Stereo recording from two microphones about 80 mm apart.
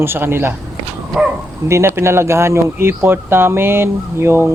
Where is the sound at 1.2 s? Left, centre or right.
Centre.